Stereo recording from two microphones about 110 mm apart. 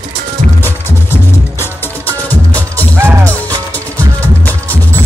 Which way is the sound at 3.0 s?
20° right (ahead or behind).